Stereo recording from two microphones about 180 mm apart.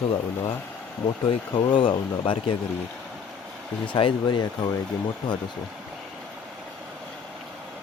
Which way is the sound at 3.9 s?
25° left (ahead or behind).